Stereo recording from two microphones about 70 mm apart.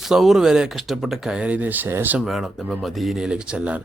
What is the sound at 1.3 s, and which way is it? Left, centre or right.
Speech, centre.